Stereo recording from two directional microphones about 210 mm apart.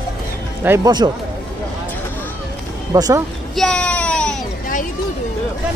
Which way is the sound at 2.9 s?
15° right (ahead or behind).